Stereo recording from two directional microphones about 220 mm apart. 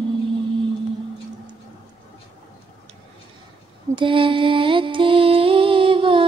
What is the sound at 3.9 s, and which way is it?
Mantra, 25° right (ahead or behind).